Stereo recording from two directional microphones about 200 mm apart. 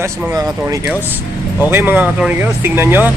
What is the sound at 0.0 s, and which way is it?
Speech, 15° right (ahead or behind).